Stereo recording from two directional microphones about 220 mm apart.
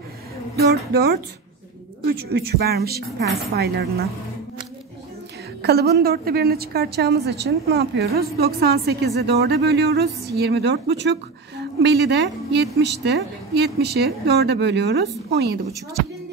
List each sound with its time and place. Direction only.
0.6 s a woman's voice: 45° right (ahead or behind)
5.6 s a woman's voice: 45° right (ahead or behind)